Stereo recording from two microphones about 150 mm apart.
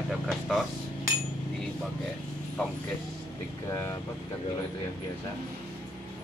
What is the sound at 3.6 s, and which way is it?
Speech, 20° left (ahead or behind).